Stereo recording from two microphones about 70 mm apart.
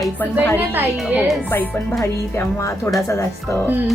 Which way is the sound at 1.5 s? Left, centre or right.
Left.